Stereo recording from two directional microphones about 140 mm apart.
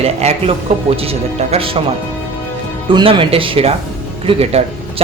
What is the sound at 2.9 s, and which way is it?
A man's voice, 40° right (ahead or behind).